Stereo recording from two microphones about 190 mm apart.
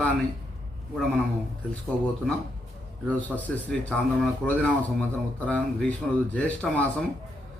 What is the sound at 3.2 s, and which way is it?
Speech, 10° left (ahead or behind).